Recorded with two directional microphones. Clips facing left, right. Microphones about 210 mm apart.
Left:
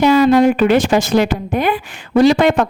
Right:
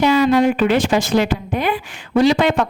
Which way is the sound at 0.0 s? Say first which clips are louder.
Left 3 dB; 45° left (ahead or behind).